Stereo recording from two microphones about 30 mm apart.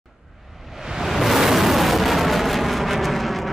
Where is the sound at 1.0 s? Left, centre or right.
Centre.